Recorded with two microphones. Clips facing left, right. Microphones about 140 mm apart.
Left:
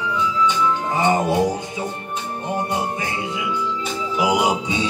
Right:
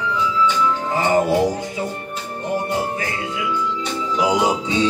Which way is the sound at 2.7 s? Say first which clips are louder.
Right 1 dB; 20° left (ahead or behind).